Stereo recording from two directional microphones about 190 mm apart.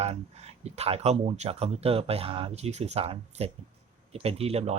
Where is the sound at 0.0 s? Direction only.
35° right (ahead or behind).